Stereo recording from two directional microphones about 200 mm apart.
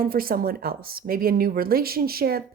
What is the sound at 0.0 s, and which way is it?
Speech, 45° right (ahead or behind).